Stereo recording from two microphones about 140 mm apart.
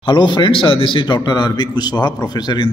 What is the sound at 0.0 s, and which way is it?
A man's voice, 35° left (ahead or behind).